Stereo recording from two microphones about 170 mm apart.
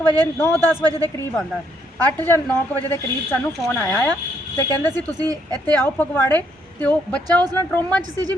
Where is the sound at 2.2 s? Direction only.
10° left (ahead or behind).